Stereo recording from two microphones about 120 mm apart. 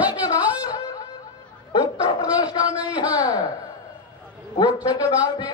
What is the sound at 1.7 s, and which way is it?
Dog, 30° left (ahead or behind).